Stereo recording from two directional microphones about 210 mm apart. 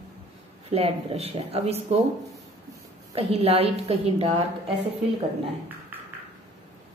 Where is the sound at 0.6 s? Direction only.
30° right (ahead or behind).